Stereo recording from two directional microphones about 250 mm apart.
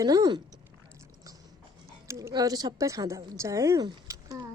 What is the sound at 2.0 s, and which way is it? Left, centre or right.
A woman's voice, centre.